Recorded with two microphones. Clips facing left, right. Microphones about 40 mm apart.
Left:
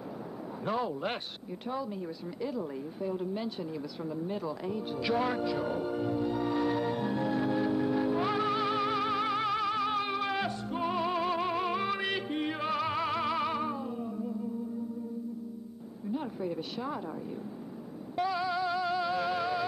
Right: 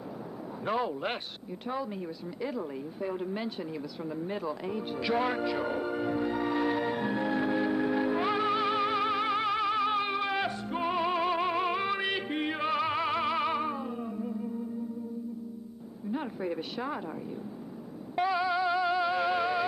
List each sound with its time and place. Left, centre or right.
0.7 s speech: centre
5.1 s music: centre
16.1 s a sound: right
16.8 s speech: right
18.1 s music: right